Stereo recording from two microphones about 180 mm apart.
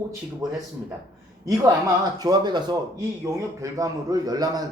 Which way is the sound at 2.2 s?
25° right (ahead or behind).